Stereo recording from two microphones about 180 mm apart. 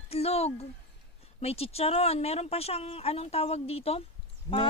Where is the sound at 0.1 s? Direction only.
35° left (ahead or behind).